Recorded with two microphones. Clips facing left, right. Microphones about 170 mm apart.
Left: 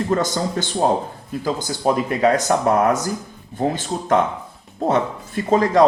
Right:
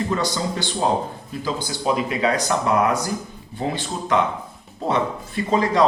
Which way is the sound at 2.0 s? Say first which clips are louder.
Left 4 dB; 45° left (ahead or behind).